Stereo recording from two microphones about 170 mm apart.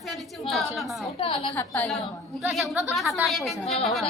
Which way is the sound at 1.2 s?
30° left (ahead or behind).